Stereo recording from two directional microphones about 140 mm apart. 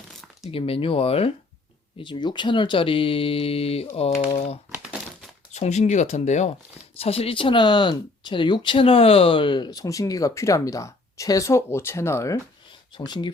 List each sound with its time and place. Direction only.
0.5 s speech: 40° left (ahead or behind)
7.0 s speech: 45° left (ahead or behind); by 12.4 s 20° left (ahead or behind)
12.9 s speech: 30° left (ahead or behind)